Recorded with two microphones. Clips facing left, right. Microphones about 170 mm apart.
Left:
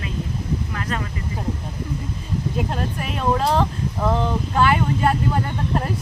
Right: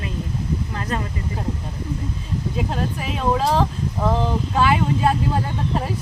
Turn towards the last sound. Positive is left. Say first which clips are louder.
# even
turn(degrees=-5)  # may be behind; listen again after turning